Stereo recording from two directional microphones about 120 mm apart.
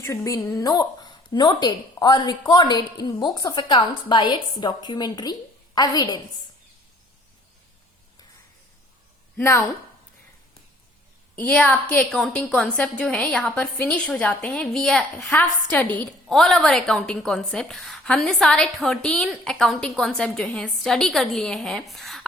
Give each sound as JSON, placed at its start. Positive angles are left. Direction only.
{"t": 0.0, "sound": "a woman's voice", "side_deg": 25}
{"t": 9.4, "sound": "a woman's voice", "side_deg": 20}
{"t": 11.3, "sound": "a woman's voice", "side_deg": 10}
{"t": 16.3, "sound": "a woman's voice", "side_deg": 5}